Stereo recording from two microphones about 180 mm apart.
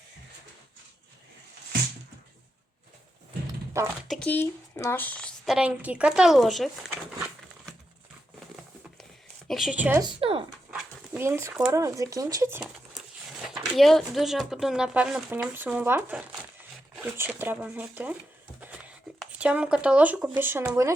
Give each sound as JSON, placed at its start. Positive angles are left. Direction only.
{"t": 4.1, "sound": "speech", "side_deg": 10}
{"t": 5.5, "sound": "speech", "side_deg": -5}
{"t": 9.5, "sound": "speech", "side_deg": 0}
{"t": 10.0, "sound": "speech", "side_deg": -25}
{"t": 10.7, "sound": "dog", "side_deg": -5}
{"t": 11.7, "sound": "speech", "side_deg": -20}
{"t": 13.4, "sound": "speech", "side_deg": 0}